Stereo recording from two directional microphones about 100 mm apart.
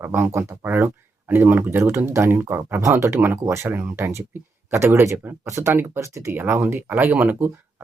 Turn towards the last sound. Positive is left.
turn(degrees=-20)  # may be behind; listen again after turning